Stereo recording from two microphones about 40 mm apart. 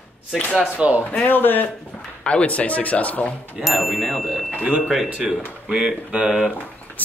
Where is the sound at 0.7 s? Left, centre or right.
Right.